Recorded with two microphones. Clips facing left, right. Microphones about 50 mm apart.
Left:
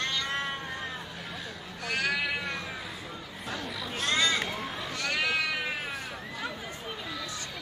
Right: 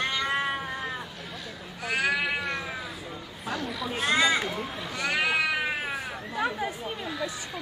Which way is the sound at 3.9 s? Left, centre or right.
Centre.